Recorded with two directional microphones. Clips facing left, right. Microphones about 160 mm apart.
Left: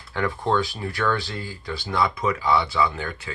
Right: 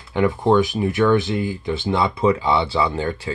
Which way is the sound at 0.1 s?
20° right (ahead or behind).